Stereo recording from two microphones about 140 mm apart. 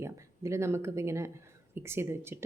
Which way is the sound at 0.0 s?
20° right (ahead or behind).